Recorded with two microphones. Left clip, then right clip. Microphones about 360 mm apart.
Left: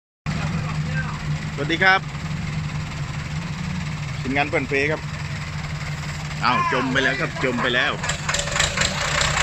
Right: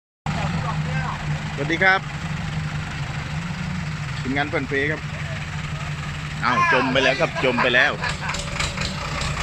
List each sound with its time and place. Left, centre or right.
1.7 s speech: centre
4.4 s speech: centre
6.4 s speech: centre
8.5 s vehicle: left